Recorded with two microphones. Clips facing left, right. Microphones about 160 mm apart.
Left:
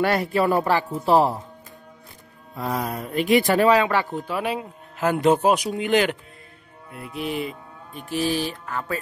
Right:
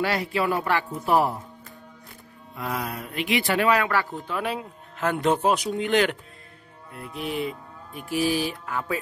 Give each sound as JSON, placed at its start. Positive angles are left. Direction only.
{"t": 0.0, "sound": "speech", "side_deg": 50}
{"t": 2.5, "sound": "speech", "side_deg": 35}
{"t": 4.3, "sound": "speech", "side_deg": 5}
{"t": 7.0, "sound": "music", "side_deg": 5}